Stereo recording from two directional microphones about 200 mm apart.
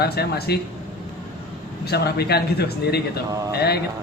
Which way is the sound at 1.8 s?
55° left (ahead or behind).